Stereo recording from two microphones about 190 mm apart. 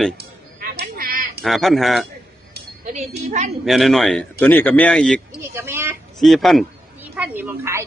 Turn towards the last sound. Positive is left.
turn(degrees=-10)  # may be behind; listen again after turning